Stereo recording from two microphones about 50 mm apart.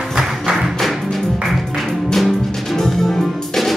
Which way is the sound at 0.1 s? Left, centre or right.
Centre.